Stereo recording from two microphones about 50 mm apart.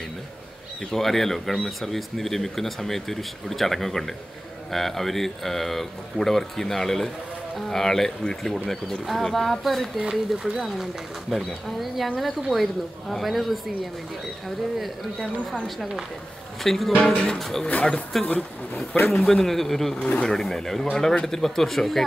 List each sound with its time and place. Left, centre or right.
0.9 s speech: centre
15.6 s speech: centre
16.9 s speech: left
17.4 s speech: centre
17.6 s speech: left
19.0 s speech: centre
20.0 s speech: left
20.2 s speech: centre